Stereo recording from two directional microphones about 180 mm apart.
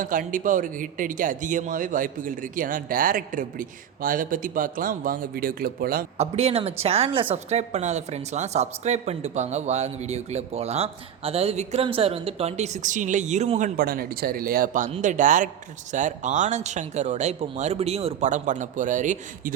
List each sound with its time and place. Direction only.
0.0 s speech: 50° right (ahead or behind)
6.1 s a woman's voice: 35° right (ahead or behind)